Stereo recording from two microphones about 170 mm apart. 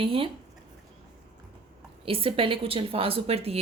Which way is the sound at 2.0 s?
35° right (ahead or behind).